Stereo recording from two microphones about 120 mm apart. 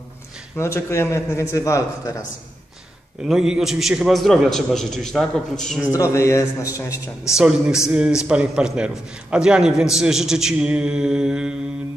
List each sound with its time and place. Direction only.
0.6 s a man's voice: 20° left (ahead or behind)
3.3 s a man's voice: 5° right (ahead or behind)
5.9 s a man's voice: 25° left (ahead or behind)
7.3 s a man's voice: 5° right (ahead or behind)